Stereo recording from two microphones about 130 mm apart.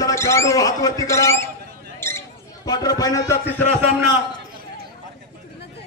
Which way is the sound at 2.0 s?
20° left (ahead or behind).